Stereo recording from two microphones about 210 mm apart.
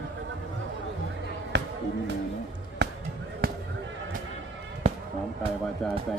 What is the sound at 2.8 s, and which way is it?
Basketball bounce, 55° right (ahead or behind).